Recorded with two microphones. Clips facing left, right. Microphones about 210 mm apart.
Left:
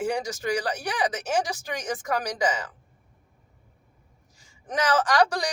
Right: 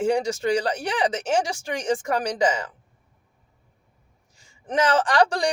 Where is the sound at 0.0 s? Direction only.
30° right (ahead or behind).